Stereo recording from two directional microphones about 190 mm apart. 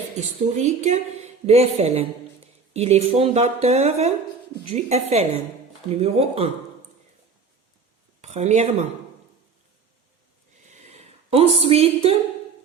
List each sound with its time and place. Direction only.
0.2 s a woman's voice: 35° right (ahead or behind)
8.2 s speech: 35° right (ahead or behind)
10.7 s a sound: 35° right (ahead or behind)